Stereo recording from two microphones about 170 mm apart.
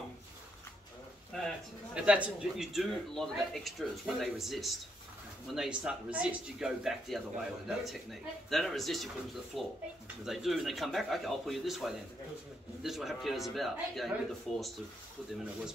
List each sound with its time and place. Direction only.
2.0 s speech: 5° right (ahead or behind)